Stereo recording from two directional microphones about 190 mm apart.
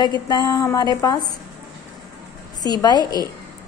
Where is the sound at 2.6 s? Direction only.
20° left (ahead or behind).